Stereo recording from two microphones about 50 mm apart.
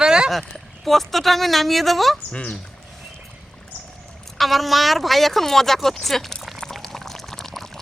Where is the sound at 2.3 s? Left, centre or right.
Left.